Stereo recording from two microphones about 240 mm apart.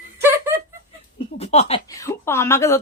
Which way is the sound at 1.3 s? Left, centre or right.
Left.